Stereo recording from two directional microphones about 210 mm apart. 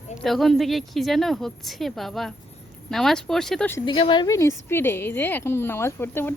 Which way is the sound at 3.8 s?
25° left (ahead or behind).